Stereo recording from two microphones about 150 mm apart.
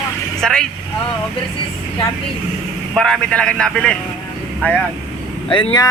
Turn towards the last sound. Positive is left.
turn(degrees=30)  # may be behind; listen again after turning